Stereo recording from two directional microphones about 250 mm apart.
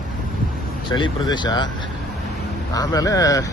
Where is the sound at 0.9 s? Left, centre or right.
Centre.